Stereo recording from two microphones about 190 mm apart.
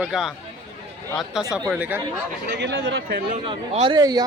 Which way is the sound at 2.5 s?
65° right (ahead or behind).